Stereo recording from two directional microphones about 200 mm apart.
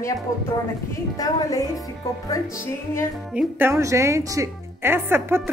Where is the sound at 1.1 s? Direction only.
20° left (ahead or behind).